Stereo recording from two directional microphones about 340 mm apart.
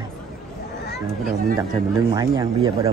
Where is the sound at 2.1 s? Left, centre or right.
Centre.